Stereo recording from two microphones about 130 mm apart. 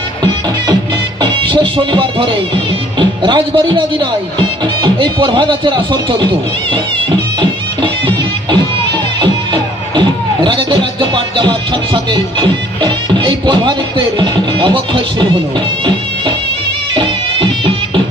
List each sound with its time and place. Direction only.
1.2 s music: 40° right (ahead or behind)
3.0 s speech: 40° right (ahead or behind)
7.8 s music: 35° right (ahead or behind)
12.1 s speech: 35° right (ahead or behind)
16.9 s music: 40° right (ahead or behind)